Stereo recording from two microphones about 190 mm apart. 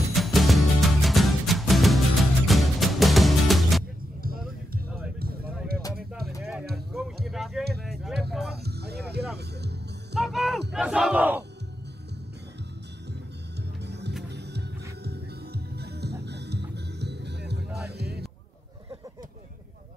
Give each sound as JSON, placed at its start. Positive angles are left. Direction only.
{"t": 0.1, "sound": "music", "side_deg": 0}
{"t": 7.2, "sound": "music", "side_deg": 0}
{"t": 7.8, "sound": "a sound", "side_deg": 0}
{"t": 8.6, "sound": "music", "side_deg": -60}
{"t": 10.1, "sound": "music", "side_deg": 0}
{"t": 10.7, "sound": "battle cry", "side_deg": -5}
{"t": 13.8, "sound": "music", "side_deg": -60}